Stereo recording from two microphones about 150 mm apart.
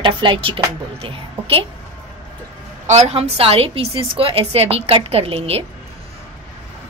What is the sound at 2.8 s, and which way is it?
A woman's voice, 45° right (ahead or behind).